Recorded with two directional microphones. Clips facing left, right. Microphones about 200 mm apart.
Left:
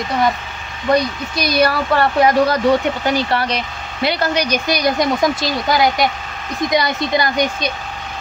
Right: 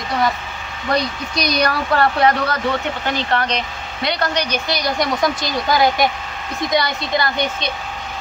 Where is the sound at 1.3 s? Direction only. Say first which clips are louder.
Left 3 dB; 5° left (ahead or behind); by 5.3 s 20° left (ahead or behind).